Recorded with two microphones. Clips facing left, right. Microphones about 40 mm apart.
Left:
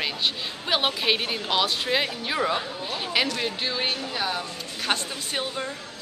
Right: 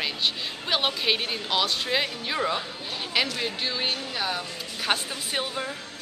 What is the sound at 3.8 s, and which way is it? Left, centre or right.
Speech, left.